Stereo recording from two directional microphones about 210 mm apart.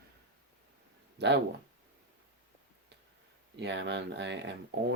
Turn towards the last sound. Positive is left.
turn(degrees=-55)  # may be behind; listen again after turning